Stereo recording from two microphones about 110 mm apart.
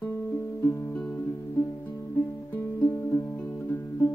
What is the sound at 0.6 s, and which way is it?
Music, 25° left (ahead or behind).